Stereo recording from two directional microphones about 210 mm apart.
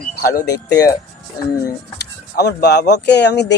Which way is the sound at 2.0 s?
50° left (ahead or behind).